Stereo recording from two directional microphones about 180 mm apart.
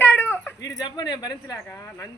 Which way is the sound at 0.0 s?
10° left (ahead or behind).